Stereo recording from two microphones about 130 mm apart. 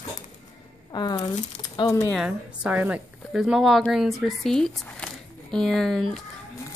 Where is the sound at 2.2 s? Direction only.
10° right (ahead or behind).